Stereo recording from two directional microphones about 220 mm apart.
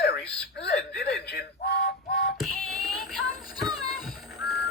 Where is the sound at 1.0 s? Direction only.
50° left (ahead or behind).